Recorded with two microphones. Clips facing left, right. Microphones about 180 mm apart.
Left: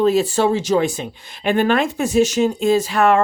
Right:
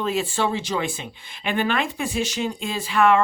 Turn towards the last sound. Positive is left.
turn(degrees=45)  # may be behind; listen again after turning